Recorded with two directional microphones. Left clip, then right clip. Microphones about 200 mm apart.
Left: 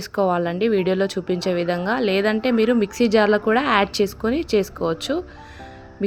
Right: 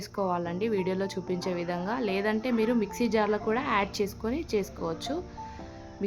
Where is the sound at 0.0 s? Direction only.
20° left (ahead or behind).